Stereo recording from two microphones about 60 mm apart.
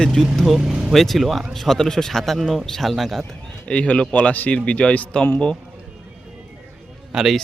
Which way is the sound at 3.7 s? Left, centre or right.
Left.